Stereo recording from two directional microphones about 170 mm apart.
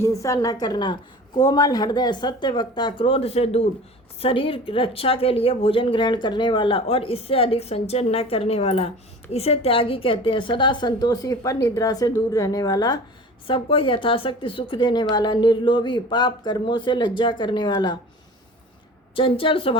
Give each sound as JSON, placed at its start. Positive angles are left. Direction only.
{"t": 0.0, "sound": "a woman's voice", "side_deg": 15}
{"t": 19.1, "sound": "a woman's voice", "side_deg": 30}